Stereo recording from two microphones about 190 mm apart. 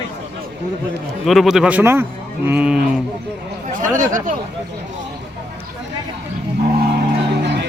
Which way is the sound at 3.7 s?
45° right (ahead or behind).